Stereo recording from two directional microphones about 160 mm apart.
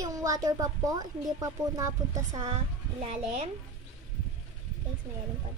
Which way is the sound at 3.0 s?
40° right (ahead or behind).